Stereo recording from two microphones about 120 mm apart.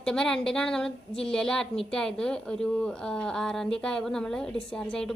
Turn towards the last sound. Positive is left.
turn(degrees=5)  # may be behind; listen again after turning